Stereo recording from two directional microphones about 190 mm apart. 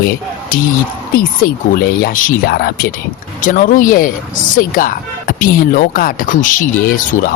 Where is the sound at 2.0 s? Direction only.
45° left (ahead or behind).